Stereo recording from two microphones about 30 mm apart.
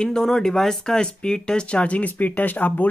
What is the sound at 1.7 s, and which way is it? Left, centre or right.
Speech, left.